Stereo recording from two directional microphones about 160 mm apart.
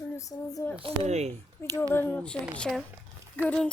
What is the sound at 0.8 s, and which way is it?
Speech, 40° right (ahead or behind).